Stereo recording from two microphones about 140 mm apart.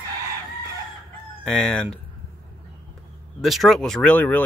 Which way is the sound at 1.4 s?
5° left (ahead or behind).